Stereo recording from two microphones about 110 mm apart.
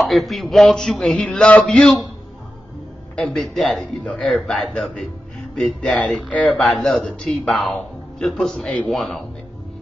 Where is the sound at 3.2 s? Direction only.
5° left (ahead or behind).